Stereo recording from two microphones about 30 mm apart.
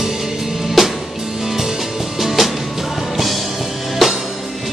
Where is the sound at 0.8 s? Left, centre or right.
Centre.